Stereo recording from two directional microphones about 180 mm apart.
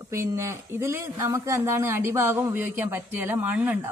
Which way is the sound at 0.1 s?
15° right (ahead or behind).